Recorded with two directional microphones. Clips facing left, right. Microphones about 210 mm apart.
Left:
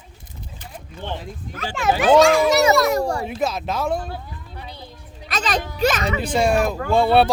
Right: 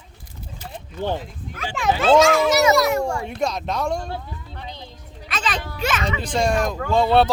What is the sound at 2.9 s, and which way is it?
Speech, 35° left (ahead or behind).